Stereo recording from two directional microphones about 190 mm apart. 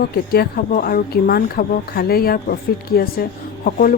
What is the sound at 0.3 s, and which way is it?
Speech, 50° left (ahead or behind).